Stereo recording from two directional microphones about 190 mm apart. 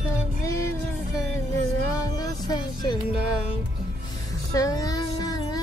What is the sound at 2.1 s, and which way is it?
Music, 20° left (ahead or behind).